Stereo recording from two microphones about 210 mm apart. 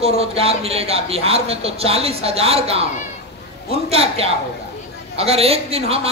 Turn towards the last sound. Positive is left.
turn(degrees=-30)  # may be behind; listen again after turning